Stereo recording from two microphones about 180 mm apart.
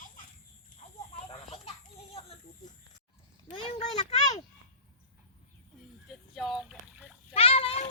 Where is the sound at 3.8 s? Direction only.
40° left (ahead or behind).